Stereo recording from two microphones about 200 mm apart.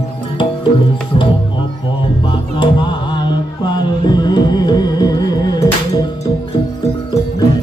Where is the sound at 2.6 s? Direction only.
25° left (ahead or behind).